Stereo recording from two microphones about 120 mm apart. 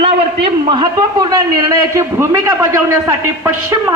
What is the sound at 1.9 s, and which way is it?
A man's voice, 20° right (ahead or behind).